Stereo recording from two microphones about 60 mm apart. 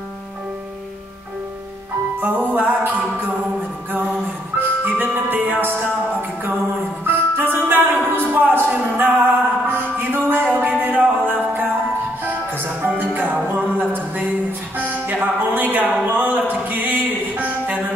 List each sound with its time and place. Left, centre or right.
2.2 s music: right
4.6 s music: right
7.1 s music: right
15.5 s a sound: right
16.2 s music: right